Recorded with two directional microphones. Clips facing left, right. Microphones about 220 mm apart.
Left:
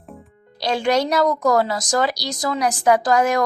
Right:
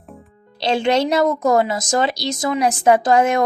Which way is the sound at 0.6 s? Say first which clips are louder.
Right 2 dB; 25° right (ahead or behind).